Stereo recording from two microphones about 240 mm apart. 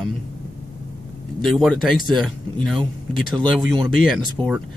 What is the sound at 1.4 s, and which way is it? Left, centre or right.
Speech, centre.